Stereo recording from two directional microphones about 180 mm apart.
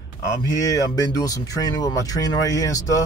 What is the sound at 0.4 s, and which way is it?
Speech, 20° left (ahead or behind).